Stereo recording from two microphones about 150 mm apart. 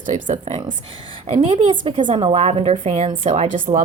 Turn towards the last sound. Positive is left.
turn(degrees=-60)  # may be behind; listen again after turning